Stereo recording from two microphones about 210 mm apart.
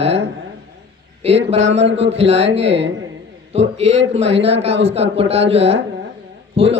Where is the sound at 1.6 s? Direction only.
60° right (ahead or behind).